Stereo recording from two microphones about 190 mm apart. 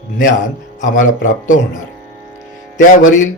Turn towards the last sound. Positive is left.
turn(degrees=45)  # may be behind; listen again after turning